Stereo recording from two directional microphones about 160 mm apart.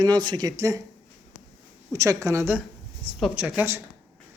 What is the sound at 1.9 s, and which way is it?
Speech, 20° right (ahead or behind).